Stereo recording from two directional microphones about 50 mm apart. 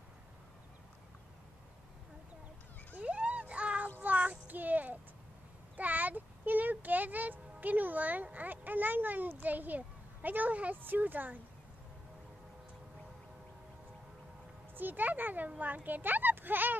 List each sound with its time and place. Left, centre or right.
3.0 s a sound: right
4.0 s child singing: right
5.8 s music: right
10.8 s a child's voice: right
14.8 s a child's voice: right